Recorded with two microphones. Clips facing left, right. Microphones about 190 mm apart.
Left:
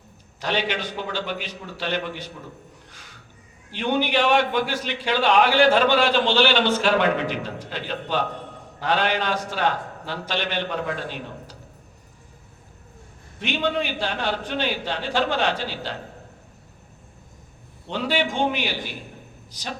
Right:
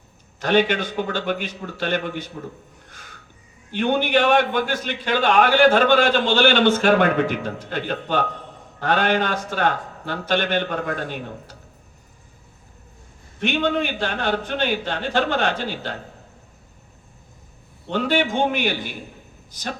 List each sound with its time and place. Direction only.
0.3 s a man's voice: 50° right (ahead or behind)
2.9 s a sound: 50° right (ahead or behind)
3.7 s a man's voice: 50° right (ahead or behind)
13.4 s a man's voice: 50° right (ahead or behind)
17.9 s a man's voice: 50° right (ahead or behind)